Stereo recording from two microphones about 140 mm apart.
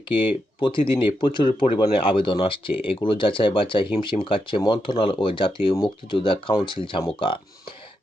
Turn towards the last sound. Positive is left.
turn(degrees=35)  # may be behind; listen again after turning